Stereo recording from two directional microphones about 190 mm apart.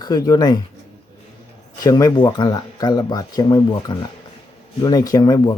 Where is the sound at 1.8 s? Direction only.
20° left (ahead or behind).